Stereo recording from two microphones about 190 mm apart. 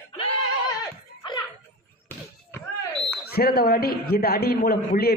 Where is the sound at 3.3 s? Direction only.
50° left (ahead or behind).